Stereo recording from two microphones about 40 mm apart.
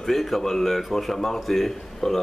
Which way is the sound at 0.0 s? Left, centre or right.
Centre.